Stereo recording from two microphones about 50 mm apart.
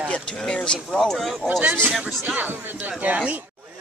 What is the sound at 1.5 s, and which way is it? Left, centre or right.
Speech, right.